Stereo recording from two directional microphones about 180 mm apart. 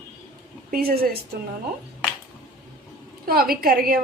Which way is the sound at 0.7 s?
60° right (ahead or behind).